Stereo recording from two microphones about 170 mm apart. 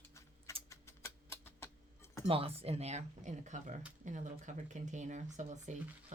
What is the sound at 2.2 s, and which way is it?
Speech, 35° right (ahead or behind).